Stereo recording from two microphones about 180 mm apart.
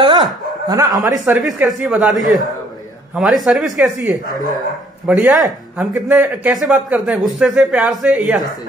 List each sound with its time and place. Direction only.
0.7 s speech: 20° right (ahead or behind)
1.4 s speech: centre (ahead or behind)